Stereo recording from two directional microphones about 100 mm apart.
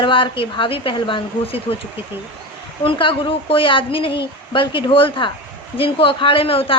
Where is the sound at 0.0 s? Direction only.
60° left (ahead or behind).